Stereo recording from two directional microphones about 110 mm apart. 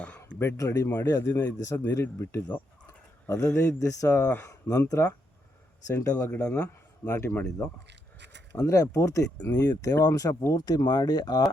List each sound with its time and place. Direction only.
0.3 s speech: 20° left (ahead or behind)
0.9 s a man's voice: 15° left (ahead or behind)
1.1 s speech: 30° left (ahead or behind)
3.7 s speech: 30° left (ahead or behind)
6.3 s a man's voice: 15° left (ahead or behind)
6.6 s speech: 25° left (ahead or behind)
8.5 s speech: 35° left (ahead or behind)